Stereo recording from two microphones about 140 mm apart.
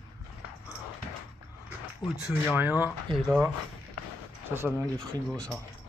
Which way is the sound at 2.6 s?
10° right (ahead or behind).